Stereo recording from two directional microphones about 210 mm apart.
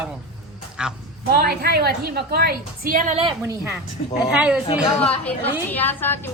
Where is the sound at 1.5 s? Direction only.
50° right (ahead or behind).